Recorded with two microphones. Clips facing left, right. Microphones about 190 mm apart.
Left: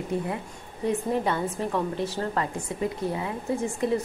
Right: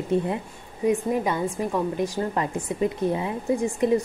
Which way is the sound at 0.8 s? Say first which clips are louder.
Right 3 dB; 10° right (ahead or behind).